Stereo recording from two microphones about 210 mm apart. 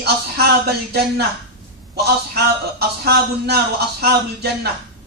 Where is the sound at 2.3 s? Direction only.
50° right (ahead or behind).